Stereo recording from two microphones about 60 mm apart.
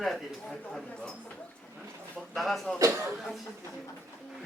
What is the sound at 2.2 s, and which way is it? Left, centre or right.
Speech, centre.